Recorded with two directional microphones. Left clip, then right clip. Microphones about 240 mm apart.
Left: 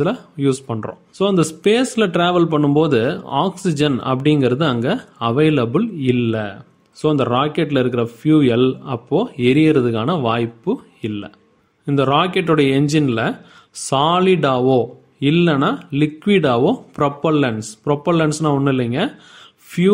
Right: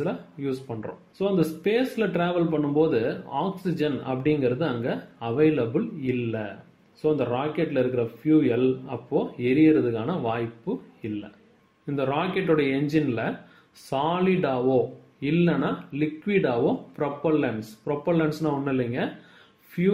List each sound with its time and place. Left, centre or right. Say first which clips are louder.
0.0 s speech: left 11 dB; left